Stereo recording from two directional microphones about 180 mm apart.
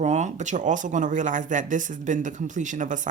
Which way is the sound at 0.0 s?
40° right (ahead or behind).